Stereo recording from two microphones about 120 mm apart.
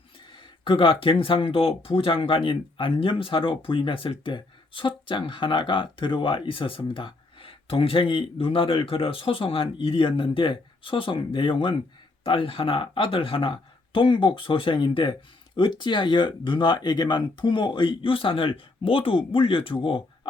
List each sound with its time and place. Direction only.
0.3 s speech: 45° left (ahead or behind)